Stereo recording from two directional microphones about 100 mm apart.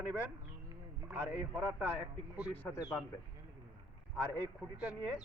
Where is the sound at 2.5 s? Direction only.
25° left (ahead or behind).